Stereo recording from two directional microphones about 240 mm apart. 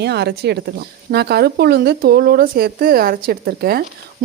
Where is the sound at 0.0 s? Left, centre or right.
Right.